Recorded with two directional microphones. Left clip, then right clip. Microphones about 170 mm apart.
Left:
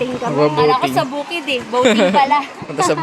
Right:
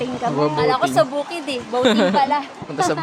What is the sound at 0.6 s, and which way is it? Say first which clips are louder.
Speech: left 2 dB; 15° right (ahead or behind).